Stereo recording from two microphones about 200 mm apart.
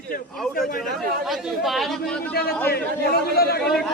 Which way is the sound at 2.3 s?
50° left (ahead or behind).